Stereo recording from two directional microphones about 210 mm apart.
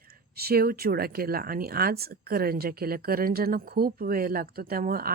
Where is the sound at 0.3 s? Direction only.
45° right (ahead or behind).